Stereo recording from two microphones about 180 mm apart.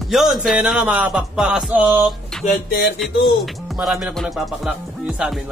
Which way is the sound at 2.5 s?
55° left (ahead or behind).